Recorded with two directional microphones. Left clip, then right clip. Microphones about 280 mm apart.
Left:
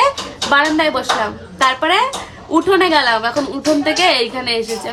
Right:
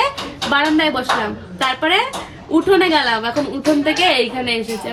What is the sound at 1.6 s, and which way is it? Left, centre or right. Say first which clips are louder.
Speech: left 3 dB; centre.